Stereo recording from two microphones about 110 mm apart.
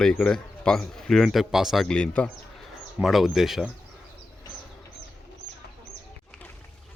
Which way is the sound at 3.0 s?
Centre (ahead or behind).